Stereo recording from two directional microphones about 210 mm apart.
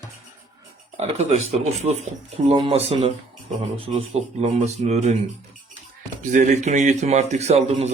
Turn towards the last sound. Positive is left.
turn(degrees=-30)  # may be behind; listen again after turning